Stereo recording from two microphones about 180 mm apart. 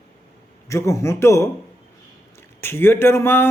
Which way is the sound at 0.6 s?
15° left (ahead or behind).